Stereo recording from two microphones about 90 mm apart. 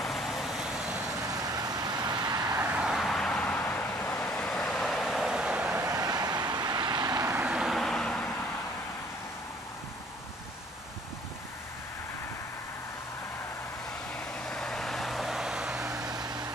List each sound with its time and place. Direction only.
0.0 s vehicle: centre (ahead or behind)
1.2 s vehicle: 45° right (ahead or behind)
2.5 s vehicle: 15° right (ahead or behind); by 3.4 s 5° left (ahead or behind)
3.4 s vehicle: 20° left (ahead or behind)
4.3 s vehicle: 10° left (ahead or behind); by 5.8 s 10° right (ahead or behind)
5.8 s vehicle: 40° right (ahead or behind)
7.4 s vehicle: 10° right (ahead or behind); by 8.4 s 10° left (ahead or behind)
14.1 s vehicle: 5° left (ahead or behind)
16.0 s vehicle: 50° right (ahead or behind)